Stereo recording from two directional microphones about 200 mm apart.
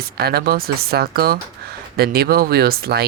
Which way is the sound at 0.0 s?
50° right (ahead or behind).